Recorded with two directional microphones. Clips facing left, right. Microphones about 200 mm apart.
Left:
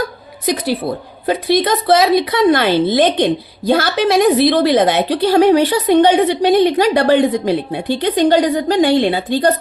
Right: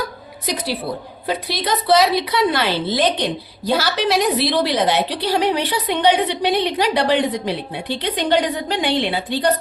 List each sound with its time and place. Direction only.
0.4 s a woman's voice: 50° left (ahead or behind)